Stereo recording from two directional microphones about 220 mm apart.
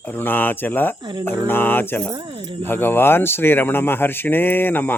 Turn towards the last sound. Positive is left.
turn(degrees=10)  # may be behind; listen again after turning